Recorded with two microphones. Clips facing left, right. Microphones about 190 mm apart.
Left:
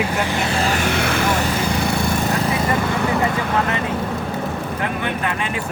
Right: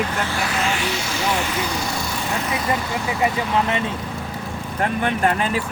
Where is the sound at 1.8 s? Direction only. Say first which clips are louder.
Left 6 dB; 60° left (ahead or behind).